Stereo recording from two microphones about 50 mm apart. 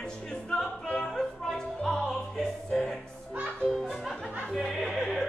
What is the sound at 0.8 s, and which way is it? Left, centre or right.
Opera, centre.